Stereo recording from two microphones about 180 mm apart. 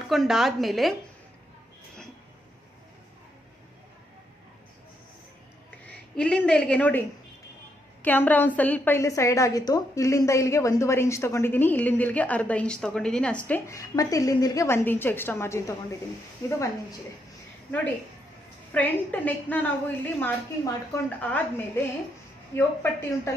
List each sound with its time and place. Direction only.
0.0 s speech: centre (ahead or behind)
5.9 s a woman's voice: 5° left (ahead or behind)
18.7 s a woman's voice: 10° left (ahead or behind)
22.6 s a woman's voice: 10° left (ahead or behind)